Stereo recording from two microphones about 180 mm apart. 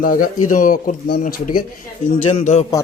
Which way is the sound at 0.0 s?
50° left (ahead or behind).